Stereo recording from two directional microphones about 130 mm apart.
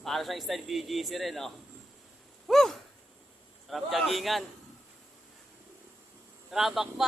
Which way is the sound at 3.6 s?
Centre (ahead or behind).